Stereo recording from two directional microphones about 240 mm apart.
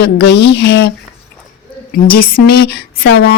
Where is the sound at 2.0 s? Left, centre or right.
Left.